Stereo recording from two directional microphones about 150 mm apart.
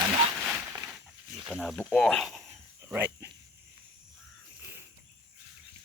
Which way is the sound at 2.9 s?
10° right (ahead or behind).